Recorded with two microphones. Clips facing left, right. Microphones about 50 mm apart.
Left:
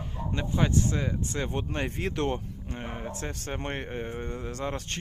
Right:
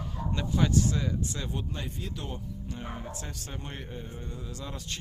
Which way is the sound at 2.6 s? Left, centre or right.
Left.